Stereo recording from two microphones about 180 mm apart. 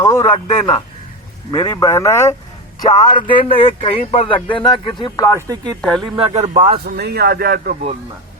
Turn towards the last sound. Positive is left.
turn(degrees=-60)  # may be behind; listen again after turning